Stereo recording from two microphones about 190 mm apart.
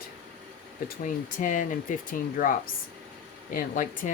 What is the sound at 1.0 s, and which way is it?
Speech, 40° left (ahead or behind).